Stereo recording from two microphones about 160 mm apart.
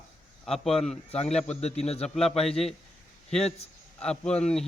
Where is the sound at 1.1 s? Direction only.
40° left (ahead or behind).